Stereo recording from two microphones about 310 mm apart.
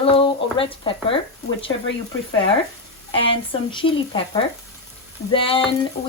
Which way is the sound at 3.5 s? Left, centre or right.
Centre.